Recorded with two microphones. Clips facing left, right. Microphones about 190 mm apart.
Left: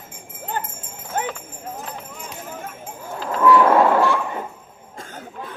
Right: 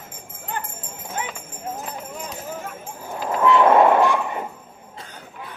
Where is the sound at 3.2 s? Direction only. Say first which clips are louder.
Left 2 dB; 20° right (ahead or behind).